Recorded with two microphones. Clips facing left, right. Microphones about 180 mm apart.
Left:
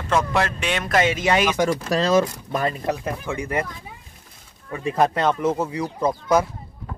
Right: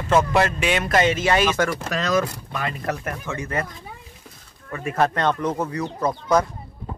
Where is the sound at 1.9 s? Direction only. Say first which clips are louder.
Left 4 dB; 35° left (ahead or behind).